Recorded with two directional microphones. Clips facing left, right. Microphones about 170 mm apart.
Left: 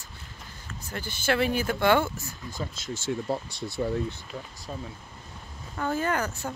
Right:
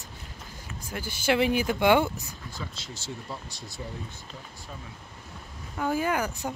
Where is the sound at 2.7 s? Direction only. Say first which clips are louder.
Left 8 dB; 50° left (ahead or behind).